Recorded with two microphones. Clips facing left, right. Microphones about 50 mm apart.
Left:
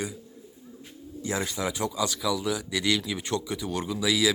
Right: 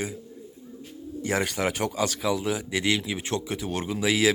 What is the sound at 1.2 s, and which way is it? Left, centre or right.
Speech, right.